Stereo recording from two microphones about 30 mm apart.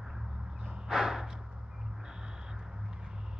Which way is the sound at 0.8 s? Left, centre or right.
Centre.